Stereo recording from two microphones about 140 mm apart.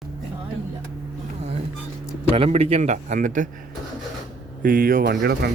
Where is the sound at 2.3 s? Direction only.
45° right (ahead or behind); by 3.5 s 70° right (ahead or behind).